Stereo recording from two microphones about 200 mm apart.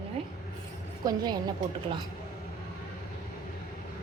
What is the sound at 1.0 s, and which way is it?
Speech, 20° right (ahead or behind).